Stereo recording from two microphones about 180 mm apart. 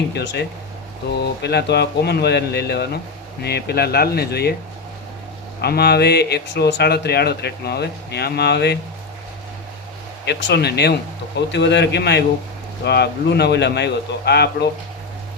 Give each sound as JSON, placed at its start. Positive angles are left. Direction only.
{"t": 0.1, "sound": "a man's voice", "side_deg": 65}
{"t": 5.6, "sound": "speech", "side_deg": 65}
{"t": 10.2, "sound": "a man's voice", "side_deg": 65}